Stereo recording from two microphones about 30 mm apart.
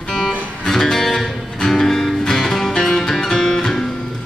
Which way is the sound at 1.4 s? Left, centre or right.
Centre.